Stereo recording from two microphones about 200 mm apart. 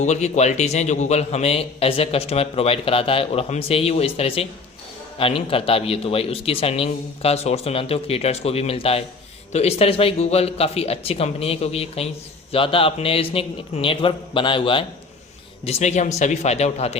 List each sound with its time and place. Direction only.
0.0 s a man's voice: 35° left (ahead or behind)